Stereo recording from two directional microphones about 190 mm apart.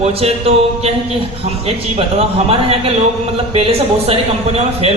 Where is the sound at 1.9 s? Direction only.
30° right (ahead or behind).